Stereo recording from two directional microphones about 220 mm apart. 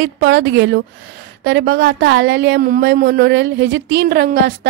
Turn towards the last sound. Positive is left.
turn(degrees=-50)  # may be behind; listen again after turning